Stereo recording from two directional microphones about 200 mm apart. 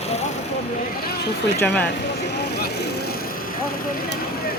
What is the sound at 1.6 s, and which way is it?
Speech, 10° left (ahead or behind).